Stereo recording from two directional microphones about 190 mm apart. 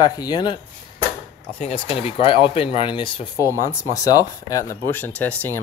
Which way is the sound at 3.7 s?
15° left (ahead or behind).